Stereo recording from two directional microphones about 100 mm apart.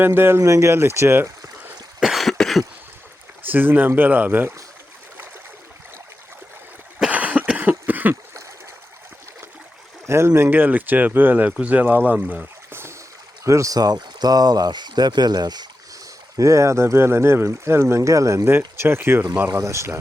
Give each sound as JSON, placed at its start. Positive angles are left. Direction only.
{"t": 0.0, "sound": "speech", "side_deg": -20}
{"t": 2.0, "sound": "cough", "side_deg": 0}
{"t": 3.4, "sound": "speech", "side_deg": -20}
{"t": 7.0, "sound": "cough", "side_deg": -15}
{"t": 8.1, "sound": "splash", "side_deg": -30}
{"t": 10.1, "sound": "speech", "side_deg": -25}
{"t": 16.4, "sound": "speech", "side_deg": -30}